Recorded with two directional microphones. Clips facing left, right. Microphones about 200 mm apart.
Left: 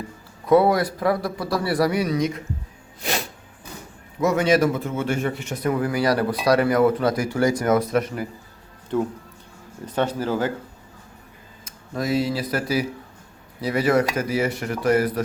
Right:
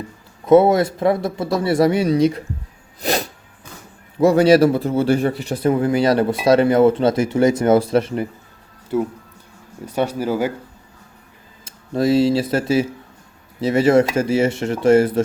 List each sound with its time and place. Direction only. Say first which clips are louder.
0.4 s speech: right 5 dB; 25° right (ahead or behind)
3.0 s a sound: right 6 dB; 40° right (ahead or behind)
4.2 s speech: right 7 dB; 30° right (ahead or behind)
8.9 s speech: right 3 dB; 10° right (ahead or behind)
11.6 s speech: right 8 dB; 30° right (ahead or behind)